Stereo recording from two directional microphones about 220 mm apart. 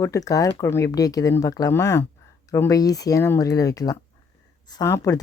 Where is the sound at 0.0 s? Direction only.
15° left (ahead or behind).